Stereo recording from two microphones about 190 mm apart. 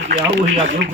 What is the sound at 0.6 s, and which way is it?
Speech, 90° right.